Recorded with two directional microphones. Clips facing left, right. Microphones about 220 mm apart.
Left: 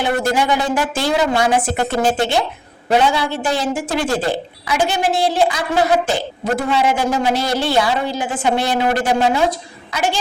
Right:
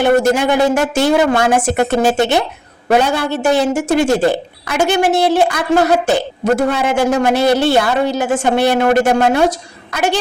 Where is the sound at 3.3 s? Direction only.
65° right (ahead or behind).